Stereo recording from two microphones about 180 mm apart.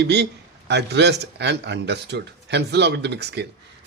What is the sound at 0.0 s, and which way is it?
Speech, 70° right (ahead or behind).